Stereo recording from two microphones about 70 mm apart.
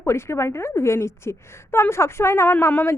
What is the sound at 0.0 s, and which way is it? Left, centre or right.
A woman's voice, left.